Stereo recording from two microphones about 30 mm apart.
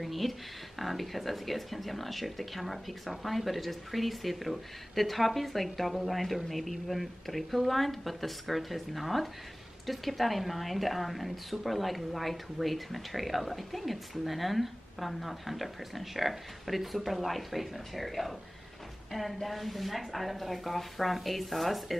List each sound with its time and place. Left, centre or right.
0.0 s speech: centre
19.4 s speech: centre